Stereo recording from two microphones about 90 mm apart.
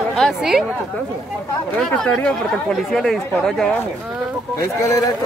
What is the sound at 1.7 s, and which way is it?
Speech, 5° left (ahead or behind).